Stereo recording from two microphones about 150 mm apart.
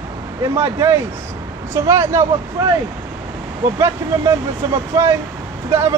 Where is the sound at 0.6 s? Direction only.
15° right (ahead or behind).